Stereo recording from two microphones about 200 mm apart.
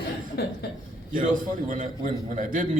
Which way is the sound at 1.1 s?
45° right (ahead or behind).